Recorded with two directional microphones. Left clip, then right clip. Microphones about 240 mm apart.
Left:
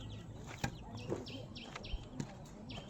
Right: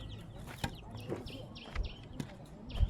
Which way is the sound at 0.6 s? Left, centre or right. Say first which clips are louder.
Right 1 dB; right.